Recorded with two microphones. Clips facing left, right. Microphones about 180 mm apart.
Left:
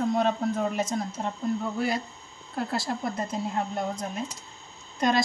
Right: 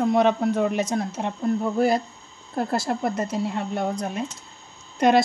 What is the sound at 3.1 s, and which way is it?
A woman's voice, 75° right (ahead or behind).